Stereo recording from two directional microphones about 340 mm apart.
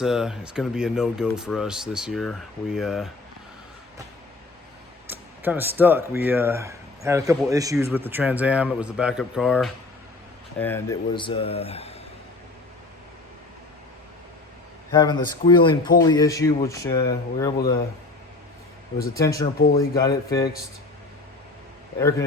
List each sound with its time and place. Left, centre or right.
0.0 s speech: centre
5.0 s speech: centre
14.9 s speech: centre
19.1 s speech: centre
19.5 s speech: left
20.0 s speech: centre